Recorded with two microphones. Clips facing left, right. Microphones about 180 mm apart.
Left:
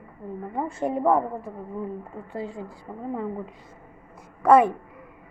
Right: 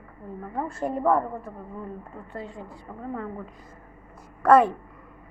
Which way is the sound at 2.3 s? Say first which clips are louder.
Left 4 dB; 30° left (ahead or behind).